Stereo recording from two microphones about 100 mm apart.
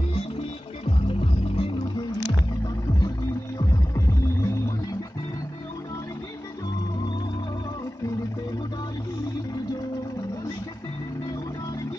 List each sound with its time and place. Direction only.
0.8 s music: 70° left (ahead or behind)
3.5 s music: 35° left (ahead or behind)